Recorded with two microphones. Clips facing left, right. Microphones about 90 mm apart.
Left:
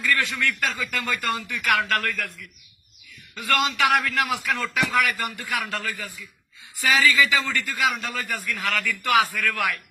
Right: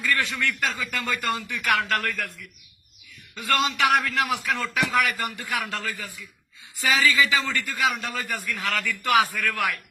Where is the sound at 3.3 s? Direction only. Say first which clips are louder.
Left 1 dB; 20° right (ahead or behind).